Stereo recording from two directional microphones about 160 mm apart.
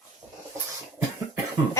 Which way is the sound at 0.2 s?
10° right (ahead or behind).